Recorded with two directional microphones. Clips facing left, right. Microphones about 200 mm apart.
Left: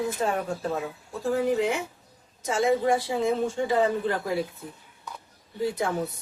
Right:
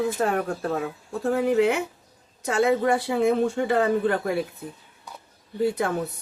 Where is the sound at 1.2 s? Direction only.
60° right (ahead or behind).